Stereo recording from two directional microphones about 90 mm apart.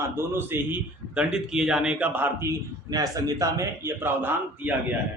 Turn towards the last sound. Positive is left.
turn(degrees=-20)  # may be behind; listen again after turning